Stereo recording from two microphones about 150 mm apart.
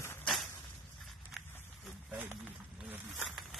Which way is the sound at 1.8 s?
10° right (ahead or behind).